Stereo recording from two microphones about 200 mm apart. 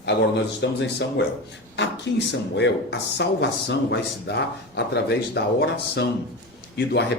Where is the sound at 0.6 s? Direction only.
60° left (ahead or behind).